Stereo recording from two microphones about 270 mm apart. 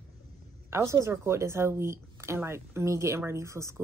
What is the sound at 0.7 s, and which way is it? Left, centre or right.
A woman's voice, centre.